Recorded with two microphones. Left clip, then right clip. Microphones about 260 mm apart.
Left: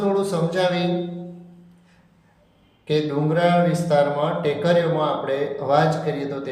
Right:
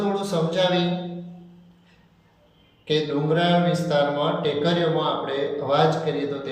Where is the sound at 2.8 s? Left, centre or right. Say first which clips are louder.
Left 1 dB; left.